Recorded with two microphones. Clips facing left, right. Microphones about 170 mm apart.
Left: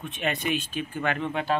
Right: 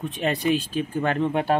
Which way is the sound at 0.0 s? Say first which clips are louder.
Right 5 dB; 35° right (ahead or behind).